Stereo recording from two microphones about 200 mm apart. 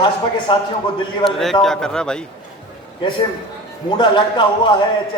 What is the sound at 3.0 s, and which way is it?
A man's voice, 25° left (ahead or behind).